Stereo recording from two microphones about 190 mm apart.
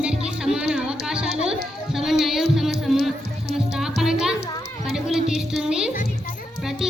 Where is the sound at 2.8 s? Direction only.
Centre (ahead or behind).